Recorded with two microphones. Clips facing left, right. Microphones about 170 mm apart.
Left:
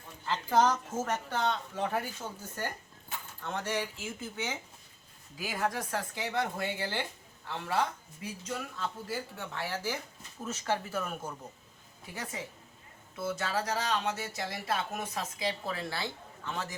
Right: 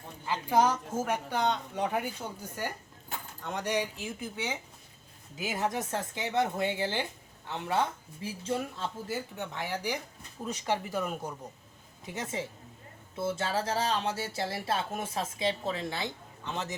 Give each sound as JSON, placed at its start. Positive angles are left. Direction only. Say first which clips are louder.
{"t": 0.3, "sound": "a woman's voice", "louder": "right 1 dB", "side_deg": -10}